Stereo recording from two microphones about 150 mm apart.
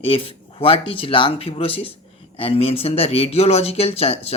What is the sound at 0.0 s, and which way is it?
Speech, 40° left (ahead or behind).